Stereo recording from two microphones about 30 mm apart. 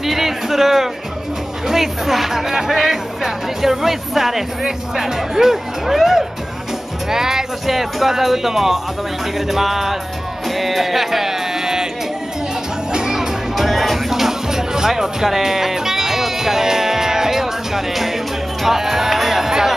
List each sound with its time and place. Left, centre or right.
0.0 s music: centre
1.7 s speech: centre
10.5 s music: centre
12.9 s music: centre
13.6 s music: centre